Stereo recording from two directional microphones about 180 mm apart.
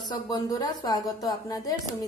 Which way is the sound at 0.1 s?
20° left (ahead or behind).